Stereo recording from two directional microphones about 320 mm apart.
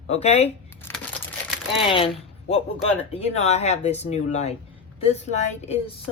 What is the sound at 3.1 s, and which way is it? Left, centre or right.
Speech, centre.